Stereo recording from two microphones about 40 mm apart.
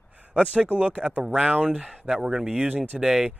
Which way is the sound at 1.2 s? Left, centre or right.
Centre.